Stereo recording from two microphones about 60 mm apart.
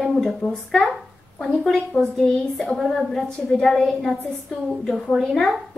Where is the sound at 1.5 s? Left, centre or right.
Centre.